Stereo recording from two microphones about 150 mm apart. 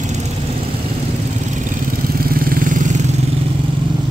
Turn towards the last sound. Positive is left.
turn(degrees=-55)  # may be behind; listen again after turning